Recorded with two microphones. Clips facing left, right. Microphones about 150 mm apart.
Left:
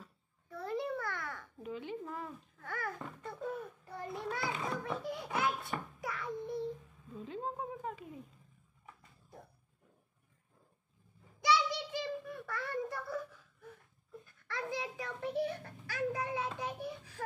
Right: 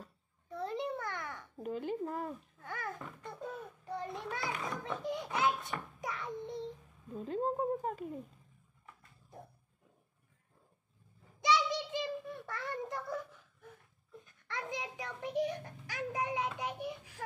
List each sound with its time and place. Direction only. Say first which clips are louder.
0.5 s babbling: even; 20° right (ahead or behind)
1.6 s a woman's voice: right 5 dB; 45° right (ahead or behind)
2.6 s babbling: left 2 dB; 20° right (ahead or behind)
4.2 s a child's voice: left 1 dB; 20° left (ahead or behind)
5.0 s a sound: right 5 dB; 20° right (ahead or behind)
7.2 s a woman's voice: right 6 dB; 45° right (ahead or behind)
11.4 s child singing: even; 20° right (ahead or behind)
14.2 s a child's voice: left 1 dB; 20° right (ahead or behind)